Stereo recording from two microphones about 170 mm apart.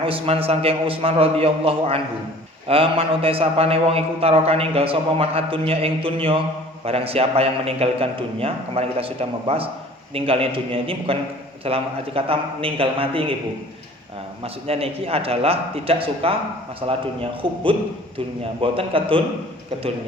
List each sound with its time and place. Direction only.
0.0 s a man's voice: 35° right (ahead or behind)
14.4 s a man's voice: 35° right (ahead or behind)